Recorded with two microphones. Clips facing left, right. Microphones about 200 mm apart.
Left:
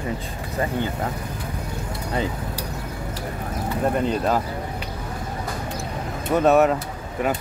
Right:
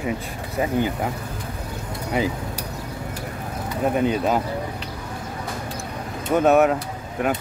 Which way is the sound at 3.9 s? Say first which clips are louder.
Right 3 dB; 5° right (ahead or behind).